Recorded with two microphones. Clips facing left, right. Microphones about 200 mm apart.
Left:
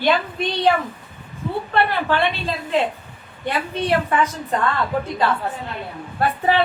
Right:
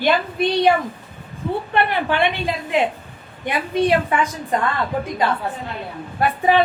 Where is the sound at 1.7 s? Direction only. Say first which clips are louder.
Left 1 dB; 15° right (ahead or behind).